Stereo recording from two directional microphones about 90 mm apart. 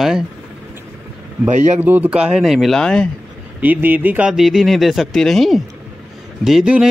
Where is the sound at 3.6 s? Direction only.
20° right (ahead or behind).